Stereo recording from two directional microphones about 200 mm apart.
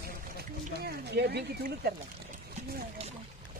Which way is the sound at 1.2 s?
55° right (ahead or behind).